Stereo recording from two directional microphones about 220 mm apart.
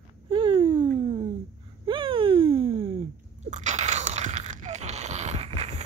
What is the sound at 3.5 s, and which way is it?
Crunch, 35° right (ahead or behind).